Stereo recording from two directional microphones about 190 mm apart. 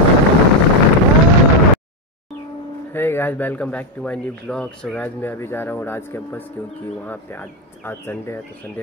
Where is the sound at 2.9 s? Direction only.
10° left (ahead or behind).